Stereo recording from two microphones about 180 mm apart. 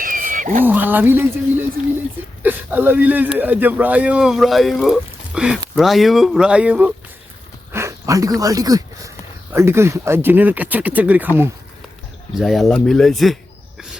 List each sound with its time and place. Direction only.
0.0 s wild animals: 50° right (ahead or behind)
0.6 s speech: 10° right (ahead or behind)
2.4 s speech: 10° right (ahead or behind)
12.3 s speech: centre (ahead or behind)